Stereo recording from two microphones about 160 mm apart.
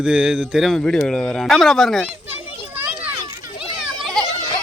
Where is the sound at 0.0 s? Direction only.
5° right (ahead or behind).